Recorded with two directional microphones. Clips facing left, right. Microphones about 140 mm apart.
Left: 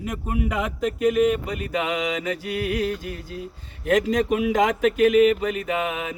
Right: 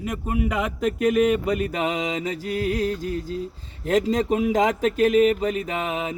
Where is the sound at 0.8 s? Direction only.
45° right (ahead or behind).